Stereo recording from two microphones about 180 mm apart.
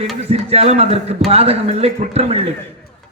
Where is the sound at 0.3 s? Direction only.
35° right (ahead or behind).